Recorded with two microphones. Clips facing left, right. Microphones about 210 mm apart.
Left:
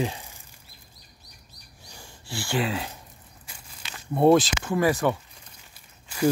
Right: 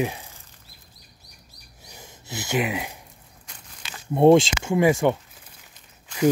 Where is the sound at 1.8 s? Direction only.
20° right (ahead or behind).